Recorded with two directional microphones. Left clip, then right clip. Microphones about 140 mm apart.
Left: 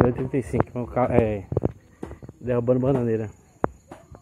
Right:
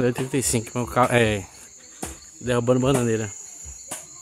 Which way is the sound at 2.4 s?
25° right (ahead or behind).